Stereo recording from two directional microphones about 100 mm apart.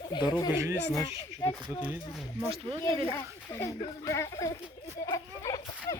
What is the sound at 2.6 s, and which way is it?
Speech, 50° right (ahead or behind).